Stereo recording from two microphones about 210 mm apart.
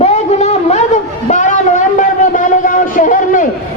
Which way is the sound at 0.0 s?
30° left (ahead or behind).